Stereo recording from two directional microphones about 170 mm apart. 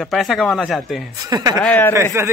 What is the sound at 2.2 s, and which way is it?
Speech, 15° right (ahead or behind).